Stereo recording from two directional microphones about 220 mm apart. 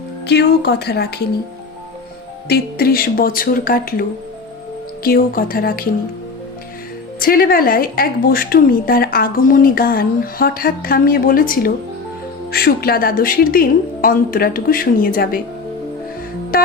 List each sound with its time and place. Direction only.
0.3 s speech: 50° left (ahead or behind)
2.5 s a woman's voice: 45° left (ahead or behind)
5.0 s a woman's voice: 40° left (ahead or behind)
7.2 s a woman's voice: 40° left (ahead or behind)